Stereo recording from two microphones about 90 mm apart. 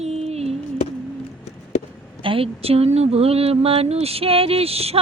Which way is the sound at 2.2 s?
80° right.